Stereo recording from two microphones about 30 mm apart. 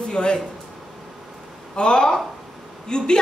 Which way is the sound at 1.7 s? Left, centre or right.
Left.